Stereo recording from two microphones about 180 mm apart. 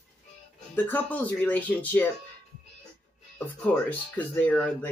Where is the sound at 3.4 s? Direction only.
5° left (ahead or behind).